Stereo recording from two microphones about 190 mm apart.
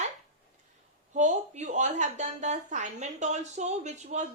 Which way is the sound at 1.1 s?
40° right (ahead or behind).